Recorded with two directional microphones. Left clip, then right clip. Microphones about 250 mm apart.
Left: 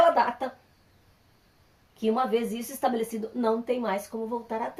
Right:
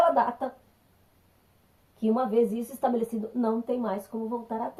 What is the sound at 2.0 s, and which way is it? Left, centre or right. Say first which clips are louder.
Speech: even; left.